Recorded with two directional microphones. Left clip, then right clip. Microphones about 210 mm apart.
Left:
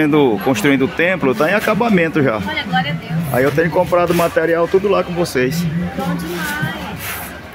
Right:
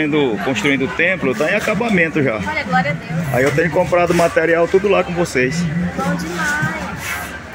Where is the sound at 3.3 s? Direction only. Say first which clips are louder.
Left 1 dB; 10° left (ahead or behind).